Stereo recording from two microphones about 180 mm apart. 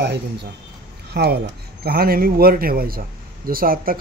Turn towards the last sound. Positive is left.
turn(degrees=-55)  # may be behind; listen again after turning